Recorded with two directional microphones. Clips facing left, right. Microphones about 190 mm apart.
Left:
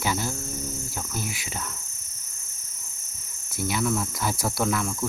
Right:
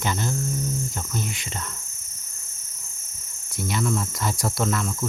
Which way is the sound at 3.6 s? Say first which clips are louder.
Even; centre (ahead or behind).